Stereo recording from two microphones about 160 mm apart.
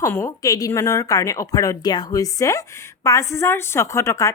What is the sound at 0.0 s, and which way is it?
A woman's voice, 15° left (ahead or behind).